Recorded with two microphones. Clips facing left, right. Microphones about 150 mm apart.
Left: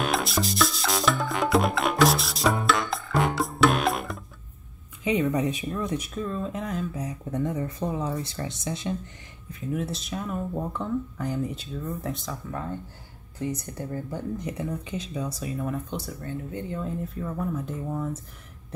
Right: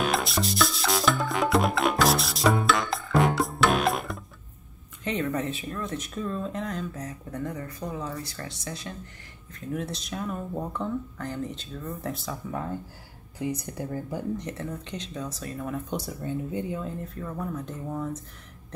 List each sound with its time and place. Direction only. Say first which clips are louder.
0.0 s music: even; centre (ahead or behind)
5.0 s speech: left 4 dB; 10° left (ahead or behind)
6.1 s speech: left 1 dB; centre (ahead or behind)
7.2 s speech: left 6 dB; 20° left (ahead or behind)
9.5 s speech: left 2 dB; 5° left (ahead or behind)
14.4 s speech: left 3 dB; 10° left (ahead or behind)
15.9 s speech: right 2 dB; 15° right (ahead or behind)
16.8 s speech: left 3 dB; centre (ahead or behind)